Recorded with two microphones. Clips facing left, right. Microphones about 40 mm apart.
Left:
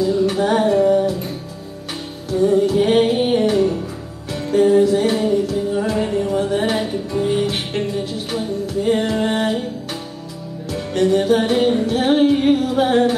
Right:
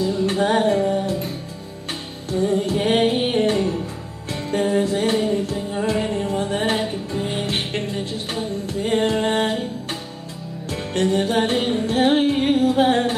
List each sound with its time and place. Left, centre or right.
0.3 s music: right
0.7 s music: left
2.5 s music: right
10.7 s music: right
11.6 s female singing: right